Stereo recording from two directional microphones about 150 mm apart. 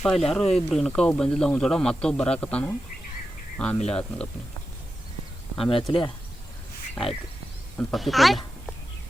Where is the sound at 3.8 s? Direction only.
5° left (ahead or behind).